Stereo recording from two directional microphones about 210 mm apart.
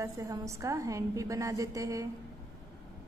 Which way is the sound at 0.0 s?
15° right (ahead or behind).